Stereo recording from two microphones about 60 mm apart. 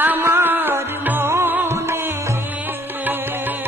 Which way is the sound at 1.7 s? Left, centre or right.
Right.